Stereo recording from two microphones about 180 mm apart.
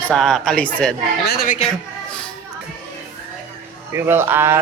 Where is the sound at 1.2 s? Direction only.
55° left (ahead or behind).